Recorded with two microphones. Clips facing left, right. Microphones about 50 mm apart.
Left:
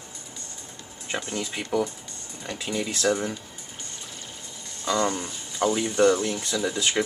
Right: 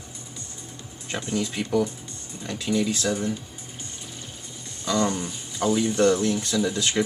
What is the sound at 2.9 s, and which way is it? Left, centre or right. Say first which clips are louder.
Speech: left 2 dB; left.